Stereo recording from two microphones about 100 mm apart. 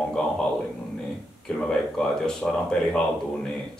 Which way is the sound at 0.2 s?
10° left (ahead or behind).